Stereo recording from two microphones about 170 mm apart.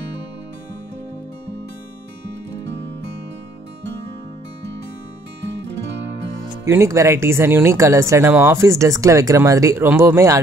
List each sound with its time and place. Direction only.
6.6 s speech: 15° right (ahead or behind)